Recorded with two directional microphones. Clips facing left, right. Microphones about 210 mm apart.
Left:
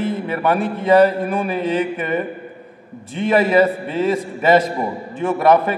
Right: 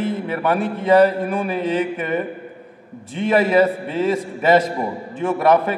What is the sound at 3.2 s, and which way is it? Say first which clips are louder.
A man's voice: left 1 dB; 15° left (ahead or behind).